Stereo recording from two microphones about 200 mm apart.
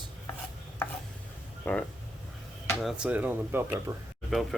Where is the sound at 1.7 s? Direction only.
10° left (ahead or behind).